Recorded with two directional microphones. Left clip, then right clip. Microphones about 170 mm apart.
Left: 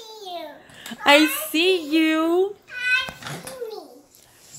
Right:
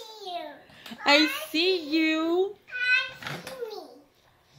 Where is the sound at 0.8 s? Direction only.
Centre (ahead or behind).